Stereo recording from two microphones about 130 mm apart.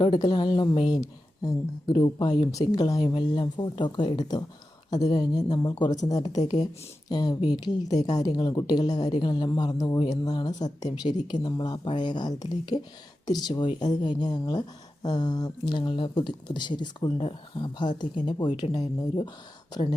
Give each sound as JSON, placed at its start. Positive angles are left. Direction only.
{"t": 0.0, "sound": "a woman's voice", "side_deg": 35}